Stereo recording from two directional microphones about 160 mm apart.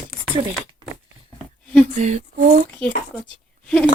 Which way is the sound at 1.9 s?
45° right (ahead or behind).